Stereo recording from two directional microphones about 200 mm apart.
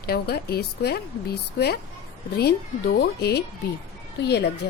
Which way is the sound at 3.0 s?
55° left (ahead or behind).